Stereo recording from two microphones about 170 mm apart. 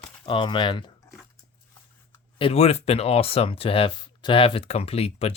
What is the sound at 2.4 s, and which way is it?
Speech, 35° left (ahead or behind).